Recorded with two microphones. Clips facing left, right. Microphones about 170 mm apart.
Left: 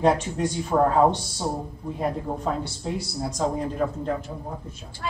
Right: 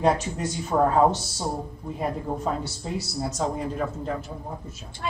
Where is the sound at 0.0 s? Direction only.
5° right (ahead or behind).